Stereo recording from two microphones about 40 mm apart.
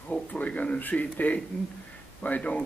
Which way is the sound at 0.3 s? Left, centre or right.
Left.